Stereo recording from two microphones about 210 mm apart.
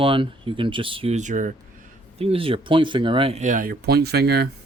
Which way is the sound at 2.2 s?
25° right (ahead or behind).